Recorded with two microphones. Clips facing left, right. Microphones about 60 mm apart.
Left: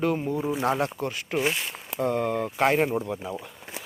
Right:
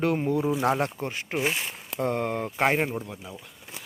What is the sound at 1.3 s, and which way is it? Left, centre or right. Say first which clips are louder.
Speech: left 1 dB; centre.